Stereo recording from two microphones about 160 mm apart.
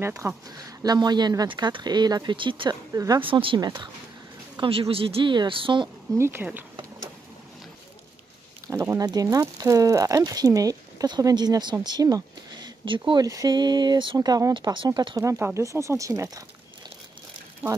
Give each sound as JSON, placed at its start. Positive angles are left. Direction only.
{"t": 0.0, "sound": "speech", "side_deg": -15}
{"t": 6.1, "sound": "speech", "side_deg": -15}
{"t": 8.6, "sound": "speech", "side_deg": -15}
{"t": 17.6, "sound": "speech", "side_deg": -10}